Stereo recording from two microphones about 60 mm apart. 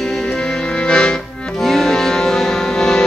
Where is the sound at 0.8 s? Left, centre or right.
Centre.